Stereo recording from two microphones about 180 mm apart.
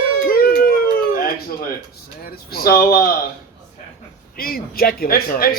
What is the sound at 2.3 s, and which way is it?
Speech, 55° left (ahead or behind).